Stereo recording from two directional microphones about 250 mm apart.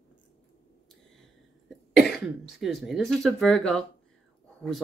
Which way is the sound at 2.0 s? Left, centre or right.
Left.